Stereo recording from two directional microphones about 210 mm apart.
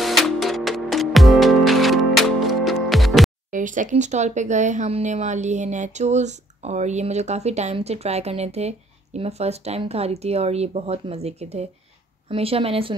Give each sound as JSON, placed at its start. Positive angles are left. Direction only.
{"t": 0.0, "sound": "music", "side_deg": 0}
{"t": 3.5, "sound": "a woman's voice", "side_deg": -40}